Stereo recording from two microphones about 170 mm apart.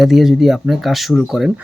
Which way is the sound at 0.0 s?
Centre (ahead or behind).